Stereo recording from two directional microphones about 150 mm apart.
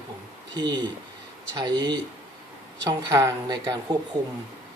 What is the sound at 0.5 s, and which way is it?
Speech, 25° right (ahead or behind).